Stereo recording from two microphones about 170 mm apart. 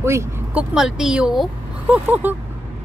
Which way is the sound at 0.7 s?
5° right (ahead or behind).